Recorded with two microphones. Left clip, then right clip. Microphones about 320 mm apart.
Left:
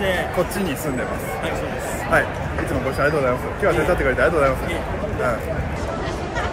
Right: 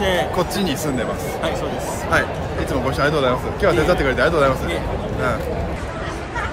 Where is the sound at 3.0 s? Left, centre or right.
Centre.